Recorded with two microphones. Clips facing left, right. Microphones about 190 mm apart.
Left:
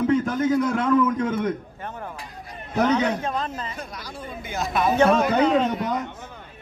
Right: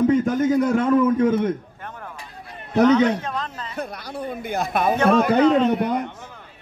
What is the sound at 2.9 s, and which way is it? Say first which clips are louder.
Speech: right 4 dB; 10° left (ahead or behind).